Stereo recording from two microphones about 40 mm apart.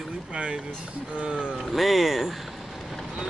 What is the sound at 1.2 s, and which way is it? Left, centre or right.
Speech, right.